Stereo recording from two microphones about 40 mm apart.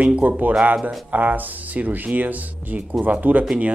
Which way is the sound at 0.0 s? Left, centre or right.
Right.